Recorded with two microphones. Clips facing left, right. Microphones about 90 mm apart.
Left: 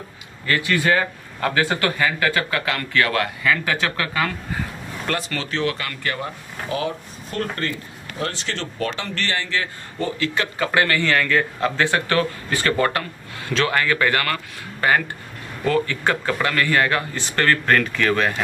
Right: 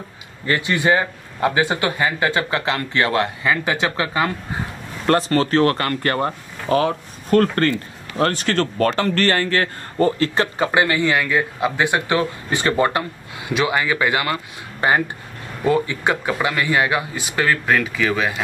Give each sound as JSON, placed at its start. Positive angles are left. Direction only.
{"t": 0.5, "sound": "a man's voice", "side_deg": -25}
{"t": 5.0, "sound": "speech", "side_deg": -40}
{"t": 10.7, "sound": "speech", "side_deg": -20}